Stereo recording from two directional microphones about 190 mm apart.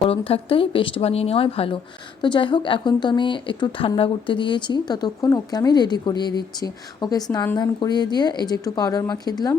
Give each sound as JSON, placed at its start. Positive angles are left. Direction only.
{"t": 0.1, "sound": "a woman's voice", "side_deg": 30}